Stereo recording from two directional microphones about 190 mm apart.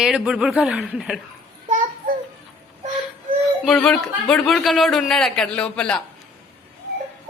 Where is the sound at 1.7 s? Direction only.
45° right (ahead or behind).